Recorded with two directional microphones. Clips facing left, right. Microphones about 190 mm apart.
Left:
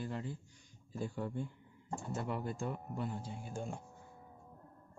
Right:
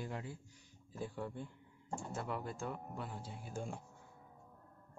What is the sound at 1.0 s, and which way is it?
Speech, centre (ahead or behind).